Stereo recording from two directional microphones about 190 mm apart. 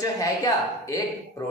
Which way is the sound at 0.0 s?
20° left (ahead or behind).